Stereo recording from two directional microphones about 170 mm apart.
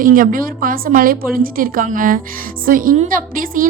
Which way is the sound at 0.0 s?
55° right (ahead or behind).